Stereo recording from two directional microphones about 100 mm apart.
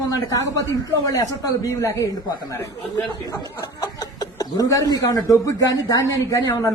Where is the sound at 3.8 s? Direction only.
40° left (ahead or behind).